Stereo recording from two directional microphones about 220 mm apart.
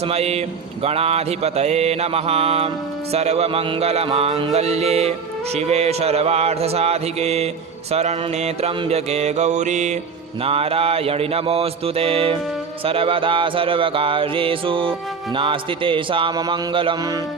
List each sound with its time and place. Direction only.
0.0 s mantra: 30° right (ahead or behind)
7.9 s music: 30° right (ahead or behind)
10.4 s mantra: 25° right (ahead or behind)